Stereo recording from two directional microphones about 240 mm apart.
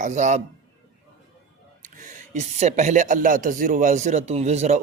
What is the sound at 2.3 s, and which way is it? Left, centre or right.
Speech, right.